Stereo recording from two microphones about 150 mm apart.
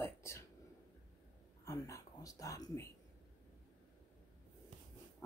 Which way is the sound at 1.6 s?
20° left (ahead or behind).